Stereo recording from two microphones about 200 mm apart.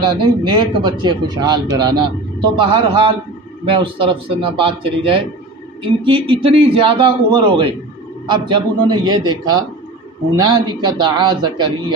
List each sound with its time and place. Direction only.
0.0 s speech: 25° right (ahead or behind)